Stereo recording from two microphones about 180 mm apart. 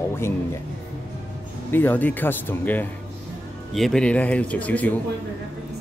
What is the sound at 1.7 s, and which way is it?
Speech, 10° left (ahead or behind).